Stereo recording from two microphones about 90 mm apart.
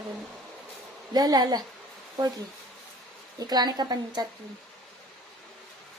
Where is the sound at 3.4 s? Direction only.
50° right (ahead or behind).